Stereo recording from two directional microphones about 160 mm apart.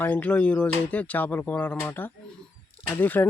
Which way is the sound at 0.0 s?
10° left (ahead or behind).